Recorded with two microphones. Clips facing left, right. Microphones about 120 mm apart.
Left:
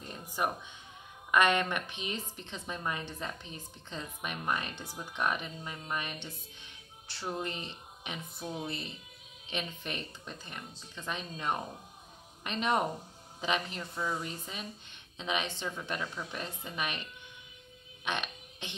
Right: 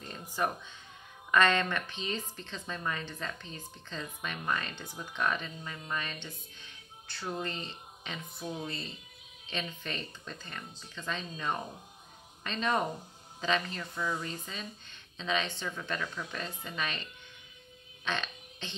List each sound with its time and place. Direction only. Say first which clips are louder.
0.4 s a woman's voice: right 1 dB; 10° left (ahead or behind)
7.1 s speech: even; 25° left (ahead or behind)
7.3 s speech: even; 15° left (ahead or behind)
8.4 s speech: right 1 dB; centre (ahead or behind)
8.6 s a woman's voice: left 1 dB; 15° left (ahead or behind)
15.1 s a woman's voice: right 1 dB; 15° left (ahead or behind)